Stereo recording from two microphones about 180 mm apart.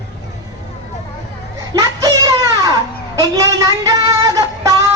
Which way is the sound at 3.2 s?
20° right (ahead or behind).